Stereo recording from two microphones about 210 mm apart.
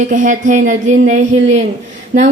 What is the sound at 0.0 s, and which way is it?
Speech, 40° right (ahead or behind).